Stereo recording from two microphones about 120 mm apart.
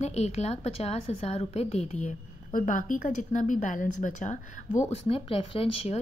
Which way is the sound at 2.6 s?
90° left.